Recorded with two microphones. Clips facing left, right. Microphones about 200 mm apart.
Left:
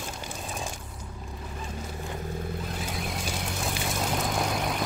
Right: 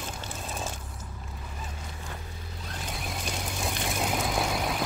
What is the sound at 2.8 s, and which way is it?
Vehicle, centre (ahead or behind).